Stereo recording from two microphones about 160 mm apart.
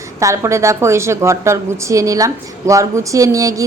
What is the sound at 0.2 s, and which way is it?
A woman's voice, 20° right (ahead or behind).